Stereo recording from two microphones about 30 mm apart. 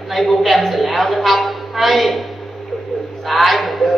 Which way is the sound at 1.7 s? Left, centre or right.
Centre.